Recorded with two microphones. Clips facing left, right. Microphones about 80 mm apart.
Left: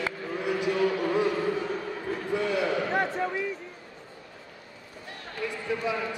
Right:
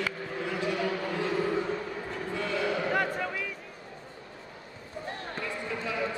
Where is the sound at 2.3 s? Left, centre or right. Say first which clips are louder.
Left 4 dB; centre.